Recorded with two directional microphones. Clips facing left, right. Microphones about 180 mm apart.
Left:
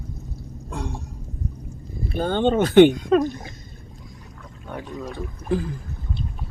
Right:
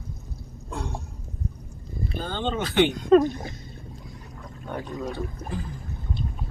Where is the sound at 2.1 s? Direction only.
55° left (ahead or behind).